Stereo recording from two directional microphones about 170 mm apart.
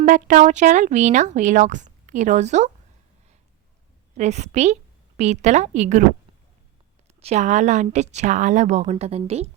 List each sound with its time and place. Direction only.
0.0 s speech: 50° right (ahead or behind)
4.2 s a woman's voice: 40° right (ahead or behind)
7.2 s a woman's voice: 40° right (ahead or behind)